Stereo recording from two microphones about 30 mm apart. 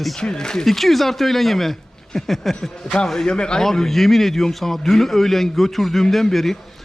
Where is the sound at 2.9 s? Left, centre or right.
Left.